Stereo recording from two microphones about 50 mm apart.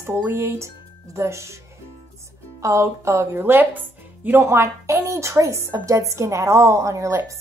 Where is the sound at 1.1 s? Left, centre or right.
Right.